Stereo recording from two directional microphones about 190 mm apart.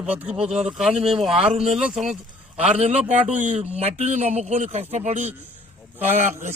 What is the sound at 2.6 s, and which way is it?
Speech, 35° right (ahead or behind).